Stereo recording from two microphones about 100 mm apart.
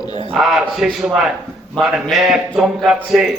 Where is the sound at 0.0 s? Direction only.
45° left (ahead or behind).